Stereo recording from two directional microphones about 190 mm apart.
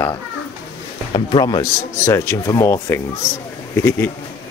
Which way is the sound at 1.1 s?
25° left (ahead or behind).